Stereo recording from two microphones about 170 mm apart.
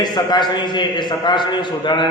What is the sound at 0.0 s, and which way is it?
A man's voice, 25° left (ahead or behind).